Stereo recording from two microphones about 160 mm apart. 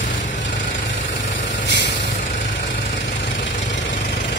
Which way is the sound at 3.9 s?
75° left (ahead or behind).